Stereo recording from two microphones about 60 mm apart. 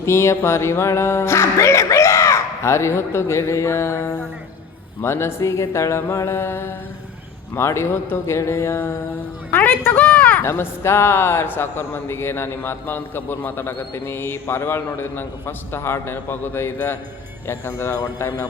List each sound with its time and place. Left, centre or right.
0.0 s music: left
9.5 s a man's voice: left
10.4 s a man's voice: left
17.4 s music: left
17.9 s speech: left